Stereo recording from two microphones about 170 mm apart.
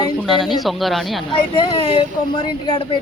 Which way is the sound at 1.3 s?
30° left (ahead or behind).